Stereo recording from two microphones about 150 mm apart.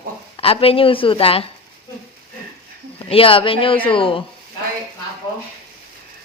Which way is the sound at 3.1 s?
35° left (ahead or behind).